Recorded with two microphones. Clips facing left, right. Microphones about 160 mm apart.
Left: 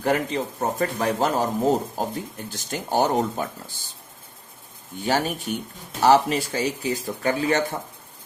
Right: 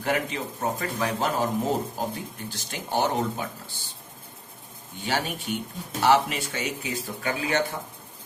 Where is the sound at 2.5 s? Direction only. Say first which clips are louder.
Left 4 dB; 45° left (ahead or behind).